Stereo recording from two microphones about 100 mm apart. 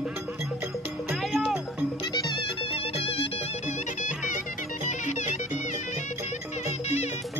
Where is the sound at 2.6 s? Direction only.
70° left (ahead or behind).